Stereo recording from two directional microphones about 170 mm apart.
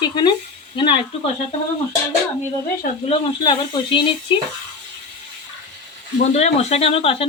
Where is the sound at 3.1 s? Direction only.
30° left (ahead or behind).